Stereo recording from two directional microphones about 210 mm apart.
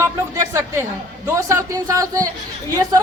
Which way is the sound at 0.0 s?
15° right (ahead or behind).